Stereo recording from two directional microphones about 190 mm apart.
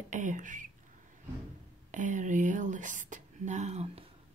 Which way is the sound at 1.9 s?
40° right (ahead or behind).